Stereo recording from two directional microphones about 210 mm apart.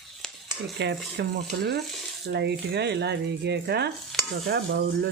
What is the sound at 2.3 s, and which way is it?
Speech, 50° right (ahead or behind).